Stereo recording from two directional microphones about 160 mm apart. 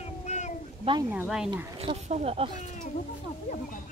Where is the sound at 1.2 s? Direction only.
Centre (ahead or behind).